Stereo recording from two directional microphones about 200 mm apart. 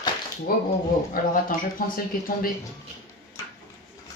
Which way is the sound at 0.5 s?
45° left (ahead or behind).